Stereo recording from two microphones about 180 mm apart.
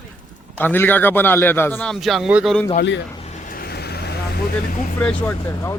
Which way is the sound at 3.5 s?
60° left (ahead or behind).